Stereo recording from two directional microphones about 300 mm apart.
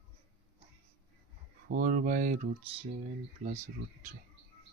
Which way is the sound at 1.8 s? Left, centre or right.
Right.